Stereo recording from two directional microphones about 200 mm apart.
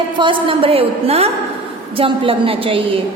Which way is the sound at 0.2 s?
25° right (ahead or behind).